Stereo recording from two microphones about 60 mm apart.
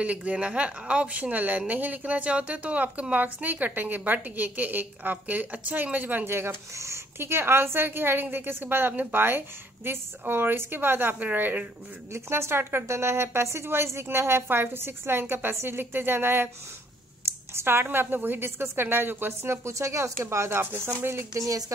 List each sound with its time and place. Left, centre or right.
0.0 s a woman's voice: right
6.2 s a woman's voice: right
6.7 s a woman's voice: right
12.1 s a woman's voice: right
17.2 s a sound: right
17.8 s a woman's voice: right
21.3 s speech: right